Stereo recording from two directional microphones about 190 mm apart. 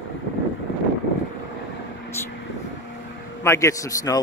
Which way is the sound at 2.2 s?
10° left (ahead or behind).